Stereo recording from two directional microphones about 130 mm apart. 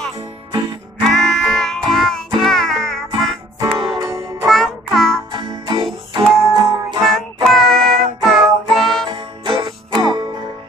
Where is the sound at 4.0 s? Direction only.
25° right (ahead or behind).